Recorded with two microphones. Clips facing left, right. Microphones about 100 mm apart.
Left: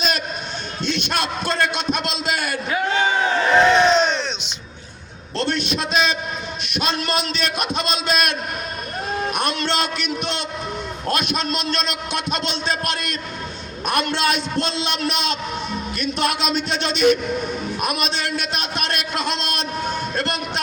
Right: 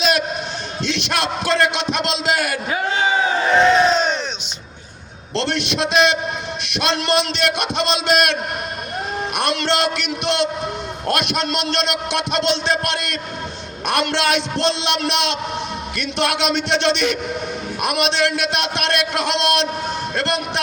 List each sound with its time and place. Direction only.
0.8 s a man's voice: 90° right
3.5 s crowd: centre (ahead or behind)
5.4 s a man's voice: 80° right
9.5 s a man's voice: 80° right
11.1 s a man's voice: 65° right (ahead or behind); by 17.1 s 85° right
17.8 s a man's voice: 70° right (ahead or behind)